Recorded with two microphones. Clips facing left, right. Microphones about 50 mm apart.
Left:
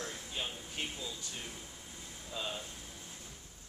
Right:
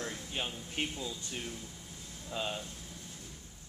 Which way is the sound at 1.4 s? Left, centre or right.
Centre.